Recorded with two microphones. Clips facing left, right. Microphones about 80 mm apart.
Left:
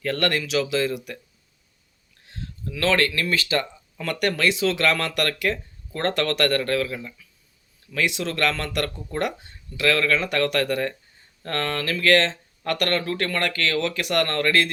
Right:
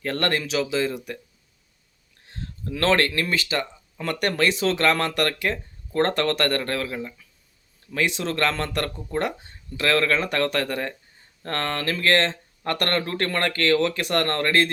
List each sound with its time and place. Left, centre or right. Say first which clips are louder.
0.0 s speech: left 1 dB; right
2.2 s a sound: even; right
2.7 s speech: right 1 dB; right
3.2 s speech: left 2 dB; right